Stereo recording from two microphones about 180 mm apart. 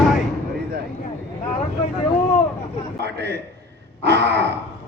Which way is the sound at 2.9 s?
70° right (ahead or behind).